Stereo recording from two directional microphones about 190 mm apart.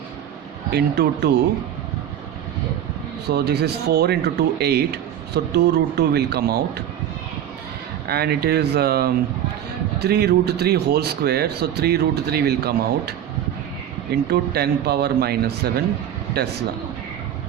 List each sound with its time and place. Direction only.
0.7 s speech: 60° right (ahead or behind)
3.2 s speech: 60° right (ahead or behind)
8.0 s speech: 55° right (ahead or behind)